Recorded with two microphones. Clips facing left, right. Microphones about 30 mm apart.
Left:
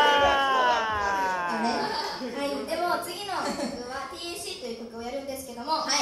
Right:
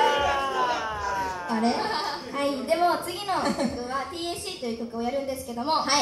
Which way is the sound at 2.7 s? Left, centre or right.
Right.